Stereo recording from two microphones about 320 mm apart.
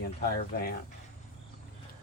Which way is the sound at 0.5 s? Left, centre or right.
Left.